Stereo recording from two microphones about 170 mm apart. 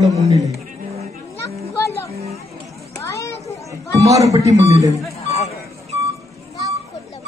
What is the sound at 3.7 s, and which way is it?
Chatter, 20° right (ahead or behind).